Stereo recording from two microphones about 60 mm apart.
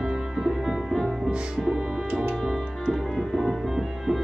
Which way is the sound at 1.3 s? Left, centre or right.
Centre.